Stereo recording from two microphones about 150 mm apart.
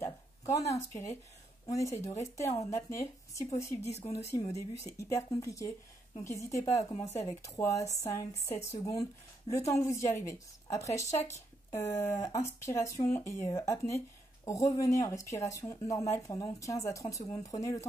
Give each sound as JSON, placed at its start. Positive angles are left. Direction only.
{"t": 0.0, "sound": "speech", "side_deg": 20}
{"t": 3.8, "sound": "speech", "side_deg": 45}
{"t": 4.9, "sound": "speech", "side_deg": 20}